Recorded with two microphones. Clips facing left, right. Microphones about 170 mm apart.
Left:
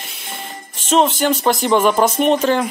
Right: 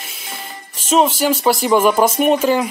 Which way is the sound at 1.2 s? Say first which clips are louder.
Right 1 dB; 5° right (ahead or behind).